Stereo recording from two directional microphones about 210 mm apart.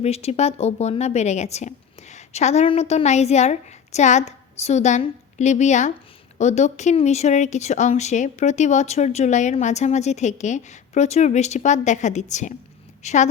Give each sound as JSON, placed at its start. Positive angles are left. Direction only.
{"t": 0.0, "sound": "a woman's voice", "side_deg": 30}